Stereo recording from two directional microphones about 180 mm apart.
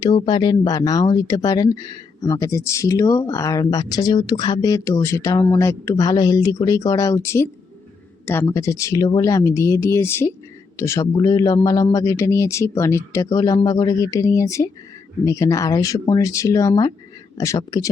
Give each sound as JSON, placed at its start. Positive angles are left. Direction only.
{"t": 0.2, "sound": "a man's voice", "side_deg": 25}